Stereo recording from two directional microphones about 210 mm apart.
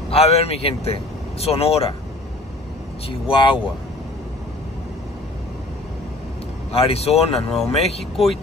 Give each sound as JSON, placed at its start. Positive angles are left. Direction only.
{"t": 0.1, "sound": "speech", "side_deg": 30}
{"t": 3.1, "sound": "speech", "side_deg": 25}
{"t": 6.7, "sound": "speech", "side_deg": 30}
{"t": 8.0, "sound": "speech", "side_deg": 0}